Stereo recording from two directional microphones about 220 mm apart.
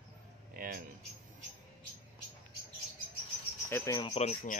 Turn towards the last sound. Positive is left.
turn(degrees=30)  # may be behind; listen again after turning